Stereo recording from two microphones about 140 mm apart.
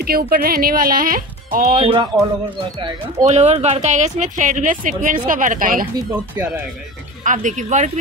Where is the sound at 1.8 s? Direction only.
35° right (ahead or behind).